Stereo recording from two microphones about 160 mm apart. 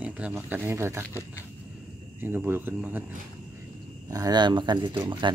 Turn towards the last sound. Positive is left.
turn(degrees=-30)  # may be behind; listen again after turning